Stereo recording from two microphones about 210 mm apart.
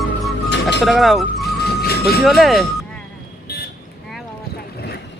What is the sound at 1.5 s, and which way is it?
Music, 50° left (ahead or behind).